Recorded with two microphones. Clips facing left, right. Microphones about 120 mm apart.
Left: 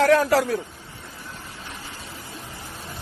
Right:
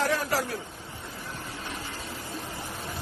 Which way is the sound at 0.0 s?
85° left.